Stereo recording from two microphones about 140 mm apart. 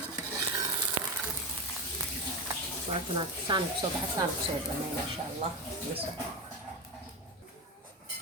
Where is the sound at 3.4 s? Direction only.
35° right (ahead or behind).